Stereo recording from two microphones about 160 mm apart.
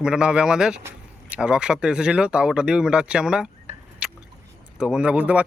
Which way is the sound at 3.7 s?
45° right (ahead or behind).